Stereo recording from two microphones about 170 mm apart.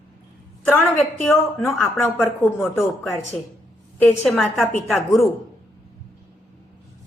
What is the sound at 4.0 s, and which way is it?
A woman's voice, 10° left (ahead or behind).